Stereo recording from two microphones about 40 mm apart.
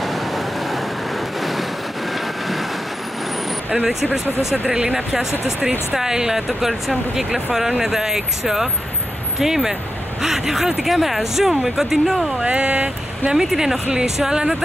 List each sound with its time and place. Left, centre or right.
3.7 s speech: centre
4.6 s speech: centre
12.4 s speech: right
13.4 s speech: centre